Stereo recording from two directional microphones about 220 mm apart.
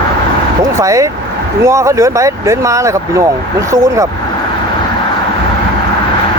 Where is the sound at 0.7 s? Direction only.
15° right (ahead or behind).